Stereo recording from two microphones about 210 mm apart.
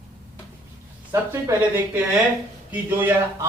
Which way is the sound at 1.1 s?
15° right (ahead or behind).